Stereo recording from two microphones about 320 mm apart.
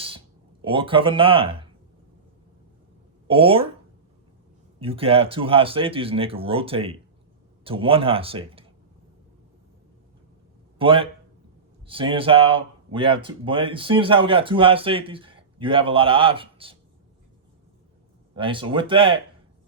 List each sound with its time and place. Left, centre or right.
0.6 s speech: centre
3.2 s speech: centre
4.8 s speech: centre
10.8 s speech: centre
18.3 s speech: centre